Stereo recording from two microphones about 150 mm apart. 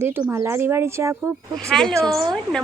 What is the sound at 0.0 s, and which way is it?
Speech, 15° right (ahead or behind).